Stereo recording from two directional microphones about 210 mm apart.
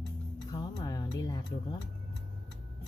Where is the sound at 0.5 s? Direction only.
20° left (ahead or behind).